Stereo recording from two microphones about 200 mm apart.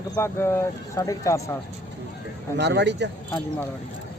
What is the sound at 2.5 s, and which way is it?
Speech, 60° right (ahead or behind).